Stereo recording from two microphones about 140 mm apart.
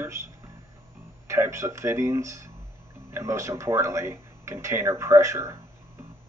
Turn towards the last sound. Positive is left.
turn(degrees=-20)  # may be behind; listen again after turning